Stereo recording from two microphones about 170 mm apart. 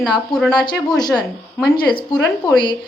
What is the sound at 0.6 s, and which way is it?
Speech, 25° left (ahead or behind).